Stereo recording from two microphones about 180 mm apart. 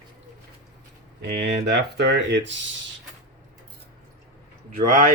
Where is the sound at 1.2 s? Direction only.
65° right (ahead or behind).